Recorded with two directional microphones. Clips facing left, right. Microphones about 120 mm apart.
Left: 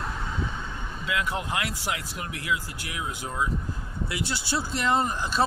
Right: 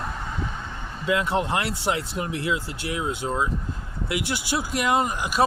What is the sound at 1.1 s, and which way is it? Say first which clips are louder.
Speech: right 6 dB; 25° right (ahead or behind).